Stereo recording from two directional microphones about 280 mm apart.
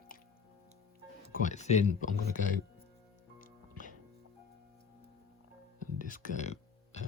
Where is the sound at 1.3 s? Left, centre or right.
Left.